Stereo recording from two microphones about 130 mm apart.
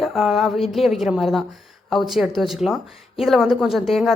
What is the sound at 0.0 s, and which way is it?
A woman's voice, centre (ahead or behind).